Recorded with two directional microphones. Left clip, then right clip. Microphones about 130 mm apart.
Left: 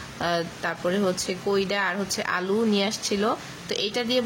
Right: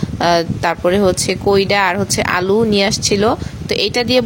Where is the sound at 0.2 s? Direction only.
60° right (ahead or behind).